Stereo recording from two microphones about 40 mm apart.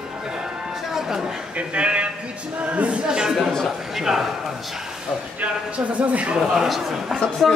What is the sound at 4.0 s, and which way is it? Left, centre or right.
Speech, centre.